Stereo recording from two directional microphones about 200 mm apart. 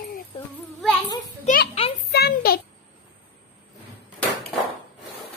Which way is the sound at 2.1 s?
50° left (ahead or behind).